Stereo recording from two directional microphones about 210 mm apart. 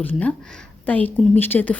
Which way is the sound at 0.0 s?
5° left (ahead or behind).